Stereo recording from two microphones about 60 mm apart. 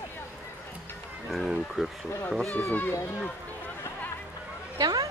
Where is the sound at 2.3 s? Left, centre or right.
Centre.